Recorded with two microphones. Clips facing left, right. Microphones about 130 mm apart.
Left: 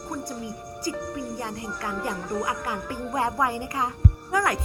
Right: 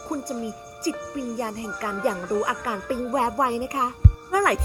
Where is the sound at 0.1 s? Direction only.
40° right (ahead or behind).